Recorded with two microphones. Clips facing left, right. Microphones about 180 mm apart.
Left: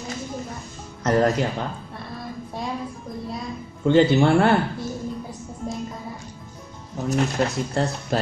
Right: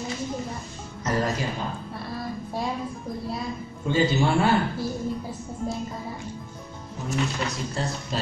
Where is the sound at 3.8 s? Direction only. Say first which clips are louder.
Left 6 dB; 60° left (ahead or behind).